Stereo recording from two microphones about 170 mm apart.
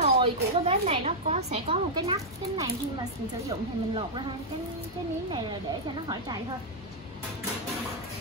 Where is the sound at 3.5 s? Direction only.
30° right (ahead or behind).